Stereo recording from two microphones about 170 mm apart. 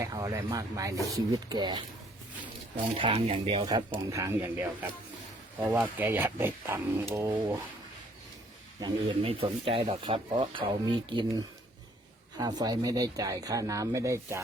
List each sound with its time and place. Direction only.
0.0 s speech: 20° right (ahead or behind); by 3.7 s 35° right (ahead or behind)
3.9 s speech: 20° right (ahead or behind)
8.8 s speech: 35° right (ahead or behind); by 14.4 s 15° right (ahead or behind)